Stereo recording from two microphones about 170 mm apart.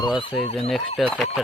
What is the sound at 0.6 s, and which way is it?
Speech, centre (ahead or behind).